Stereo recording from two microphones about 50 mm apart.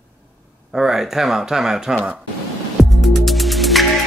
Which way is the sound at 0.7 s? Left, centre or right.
Centre.